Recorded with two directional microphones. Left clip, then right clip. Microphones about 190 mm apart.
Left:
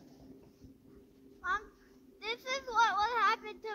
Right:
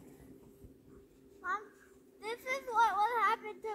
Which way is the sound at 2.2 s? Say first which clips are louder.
Left 1 dB; 15° right (ahead or behind).